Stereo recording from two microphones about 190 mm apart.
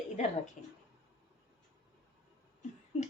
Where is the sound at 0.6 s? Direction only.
40° left (ahead or behind).